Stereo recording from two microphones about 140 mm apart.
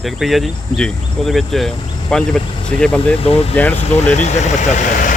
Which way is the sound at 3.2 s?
45° left (ahead or behind).